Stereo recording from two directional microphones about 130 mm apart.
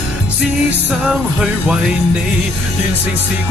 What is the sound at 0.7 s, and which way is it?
Music, 5° right (ahead or behind).